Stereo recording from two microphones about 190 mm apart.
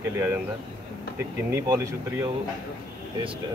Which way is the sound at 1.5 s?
15° right (ahead or behind).